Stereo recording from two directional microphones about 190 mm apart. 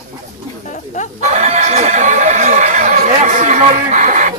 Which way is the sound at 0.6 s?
40° left (ahead or behind).